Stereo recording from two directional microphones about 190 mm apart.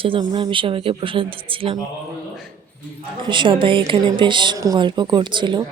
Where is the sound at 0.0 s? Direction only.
25° right (ahead or behind).